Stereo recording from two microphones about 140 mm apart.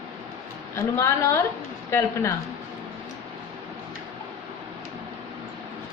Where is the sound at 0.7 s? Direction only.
20° left (ahead or behind).